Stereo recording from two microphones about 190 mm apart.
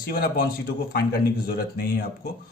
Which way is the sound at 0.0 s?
50° left (ahead or behind).